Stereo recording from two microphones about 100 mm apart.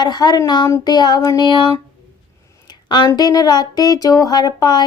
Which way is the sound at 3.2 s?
40° left (ahead or behind).